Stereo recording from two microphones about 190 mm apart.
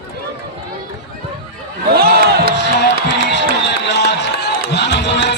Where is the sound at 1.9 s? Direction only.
55° right (ahead or behind).